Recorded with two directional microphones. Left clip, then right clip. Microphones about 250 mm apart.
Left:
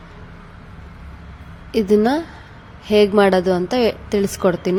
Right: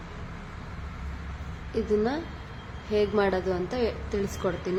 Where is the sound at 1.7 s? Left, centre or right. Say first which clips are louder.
Left 11 dB; left.